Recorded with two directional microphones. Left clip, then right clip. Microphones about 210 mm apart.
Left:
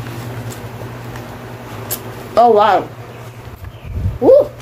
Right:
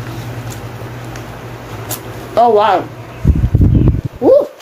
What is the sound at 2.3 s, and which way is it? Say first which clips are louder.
Speech: even; 5° left (ahead or behind).